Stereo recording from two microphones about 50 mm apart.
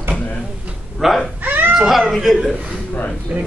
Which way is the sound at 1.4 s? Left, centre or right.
Right.